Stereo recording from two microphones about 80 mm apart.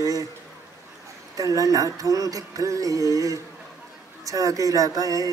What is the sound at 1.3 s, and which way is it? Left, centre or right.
Speech, right.